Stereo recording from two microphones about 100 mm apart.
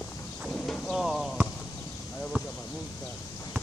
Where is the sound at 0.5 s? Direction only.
10° left (ahead or behind).